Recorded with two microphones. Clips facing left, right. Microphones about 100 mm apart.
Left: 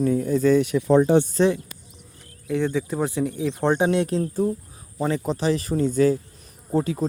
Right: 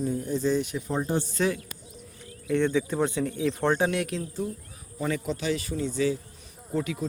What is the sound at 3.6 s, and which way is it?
Speech, 20° left (ahead or behind).